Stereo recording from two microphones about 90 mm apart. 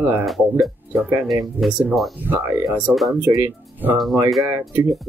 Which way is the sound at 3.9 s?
Centre (ahead or behind).